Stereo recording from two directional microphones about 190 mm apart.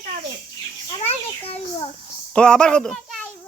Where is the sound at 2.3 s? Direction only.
5° left (ahead or behind).